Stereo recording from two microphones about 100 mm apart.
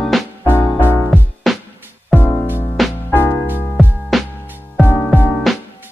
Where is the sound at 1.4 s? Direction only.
Centre (ahead or behind).